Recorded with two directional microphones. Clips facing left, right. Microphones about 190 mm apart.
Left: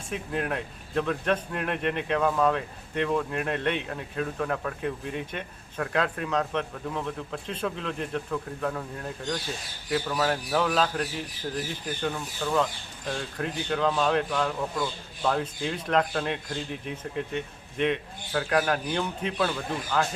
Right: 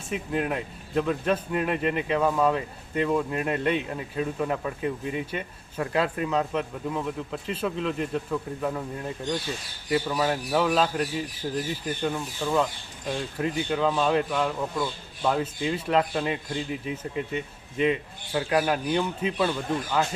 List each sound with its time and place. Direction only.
0.1 s a man's voice: 5° right (ahead or behind)
12.0 s a man's voice: 5° right (ahead or behind)